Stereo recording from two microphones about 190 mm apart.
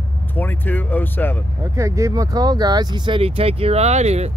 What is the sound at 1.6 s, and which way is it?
Speech, 15° right (ahead or behind).